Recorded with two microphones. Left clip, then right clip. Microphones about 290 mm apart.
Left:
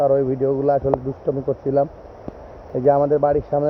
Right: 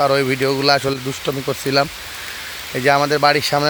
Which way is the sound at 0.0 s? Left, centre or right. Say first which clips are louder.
Right 1 dB; right.